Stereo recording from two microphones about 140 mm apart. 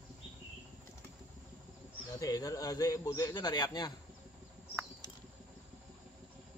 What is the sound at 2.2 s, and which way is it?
A man's voice, 25° left (ahead or behind).